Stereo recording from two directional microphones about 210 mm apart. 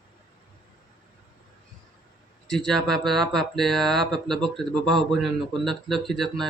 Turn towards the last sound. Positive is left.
turn(degrees=0)  # may be behind; listen again after turning